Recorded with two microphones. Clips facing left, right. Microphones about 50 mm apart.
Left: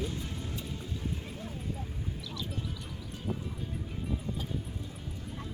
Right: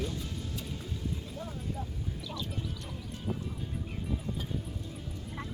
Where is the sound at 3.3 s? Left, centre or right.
Centre.